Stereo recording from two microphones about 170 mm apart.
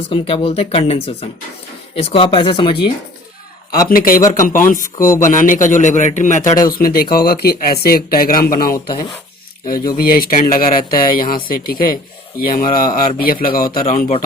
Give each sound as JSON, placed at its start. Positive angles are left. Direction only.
{"t": 0.1, "sound": "speech", "side_deg": 35}
{"t": 3.8, "sound": "a man's voice", "side_deg": 55}
{"t": 6.7, "sound": "speech", "side_deg": 60}
{"t": 8.7, "sound": "speech", "side_deg": 25}
{"t": 10.0, "sound": "speech", "side_deg": 60}